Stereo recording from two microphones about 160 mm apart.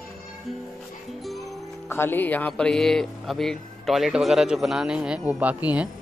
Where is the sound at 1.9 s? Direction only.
15° left (ahead or behind).